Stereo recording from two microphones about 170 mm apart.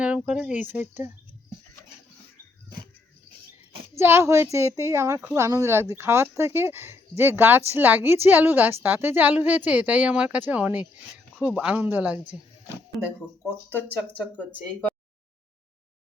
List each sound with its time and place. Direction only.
0.0 s a woman's voice: 5° right (ahead or behind)
3.9 s a woman's voice: 15° right (ahead or behind)
13.7 s speech: 10° left (ahead or behind)